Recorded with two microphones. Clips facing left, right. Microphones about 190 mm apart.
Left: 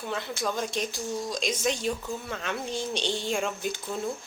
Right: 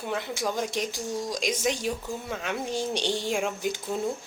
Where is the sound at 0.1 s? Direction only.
15° right (ahead or behind).